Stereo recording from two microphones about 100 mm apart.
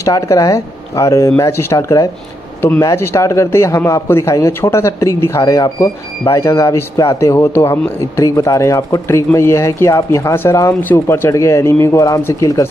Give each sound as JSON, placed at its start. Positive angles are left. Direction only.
{"t": 0.0, "sound": "a man's voice", "side_deg": 35}